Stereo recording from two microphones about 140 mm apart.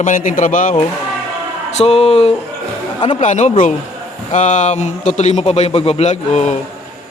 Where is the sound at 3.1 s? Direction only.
55° left (ahead or behind).